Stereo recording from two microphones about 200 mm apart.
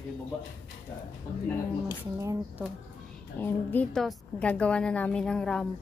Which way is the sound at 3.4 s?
10° left (ahead or behind).